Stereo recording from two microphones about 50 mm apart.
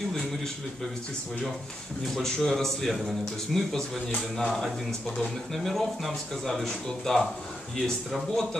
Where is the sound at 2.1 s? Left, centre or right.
Centre.